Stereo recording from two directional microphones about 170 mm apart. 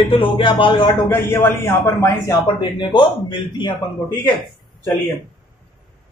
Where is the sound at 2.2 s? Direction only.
25° left (ahead or behind).